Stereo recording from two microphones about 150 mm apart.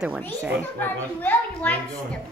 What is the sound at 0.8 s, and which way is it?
A child's voice, 10° left (ahead or behind).